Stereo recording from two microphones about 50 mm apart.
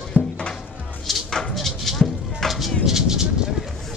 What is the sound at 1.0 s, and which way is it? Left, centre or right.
Clip-clop, centre.